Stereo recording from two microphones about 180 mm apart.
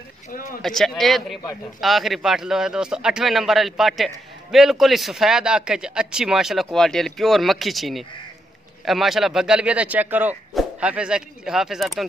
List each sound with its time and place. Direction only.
0.3 s speech: 50° left (ahead or behind)
0.6 s speech: centre (ahead or behind)